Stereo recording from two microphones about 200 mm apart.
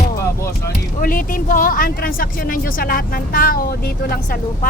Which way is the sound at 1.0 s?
45° left (ahead or behind).